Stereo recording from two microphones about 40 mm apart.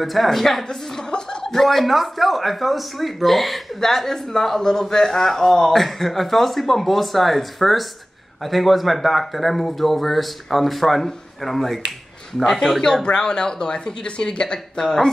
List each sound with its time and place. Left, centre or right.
0.0 s speech: centre
13.0 s speech: left
14.8 s speech: centre